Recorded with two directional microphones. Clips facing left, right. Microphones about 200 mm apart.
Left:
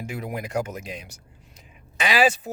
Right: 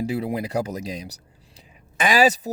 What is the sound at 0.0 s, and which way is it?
Speech, 30° right (ahead or behind).